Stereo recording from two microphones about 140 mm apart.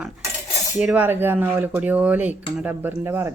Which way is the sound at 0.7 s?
10° right (ahead or behind).